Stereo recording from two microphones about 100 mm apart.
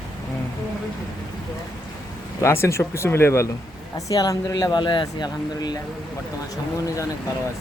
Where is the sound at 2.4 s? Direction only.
30° left (ahead or behind).